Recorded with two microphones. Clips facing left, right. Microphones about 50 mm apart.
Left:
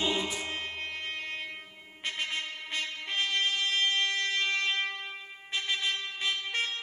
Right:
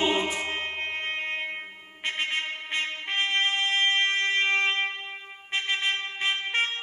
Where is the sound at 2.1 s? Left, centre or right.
Right.